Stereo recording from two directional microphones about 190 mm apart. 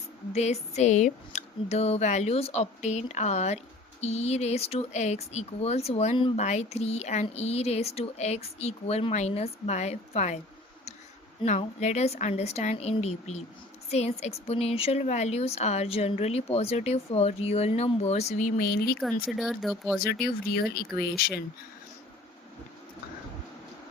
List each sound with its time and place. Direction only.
0.3 s speech: 35° left (ahead or behind)
11.4 s speech: 40° left (ahead or behind); by 18.9 s 55° left (ahead or behind)
19.4 s speech: centre (ahead or behind)
20.0 s speech: 55° left (ahead or behind)